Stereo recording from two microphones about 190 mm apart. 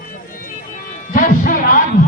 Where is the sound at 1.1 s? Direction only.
45° left (ahead or behind).